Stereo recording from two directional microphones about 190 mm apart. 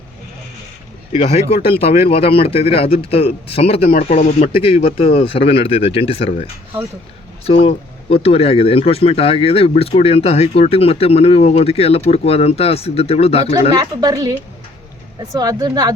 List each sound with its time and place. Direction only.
1.1 s speech: 30° left (ahead or behind)
13.7 s speech: 20° right (ahead or behind)